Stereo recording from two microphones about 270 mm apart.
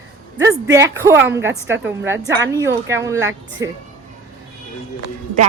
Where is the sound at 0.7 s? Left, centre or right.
Centre.